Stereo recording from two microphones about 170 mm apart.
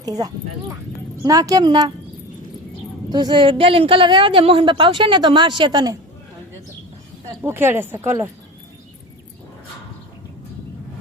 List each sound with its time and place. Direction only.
0.0 s a woman's voice: 20° right (ahead or behind)
3.1 s a woman's voice: 25° right (ahead or behind)
7.4 s speech: 15° right (ahead or behind)